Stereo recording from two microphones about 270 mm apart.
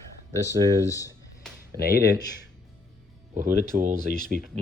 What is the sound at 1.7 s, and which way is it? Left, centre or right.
Speech, centre.